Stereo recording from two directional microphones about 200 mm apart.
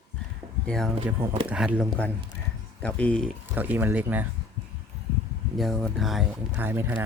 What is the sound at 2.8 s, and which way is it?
Speech, 5° left (ahead or behind).